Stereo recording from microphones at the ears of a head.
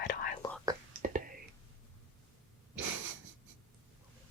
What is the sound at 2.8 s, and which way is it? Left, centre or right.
Wheeze, right.